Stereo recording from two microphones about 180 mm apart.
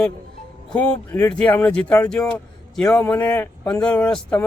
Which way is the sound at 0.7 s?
5° left (ahead or behind).